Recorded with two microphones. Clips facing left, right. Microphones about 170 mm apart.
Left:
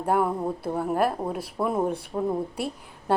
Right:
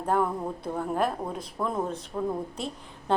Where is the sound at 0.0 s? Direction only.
10° left (ahead or behind).